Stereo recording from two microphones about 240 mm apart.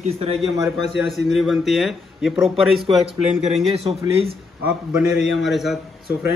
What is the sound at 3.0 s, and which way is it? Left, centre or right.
Speech, left.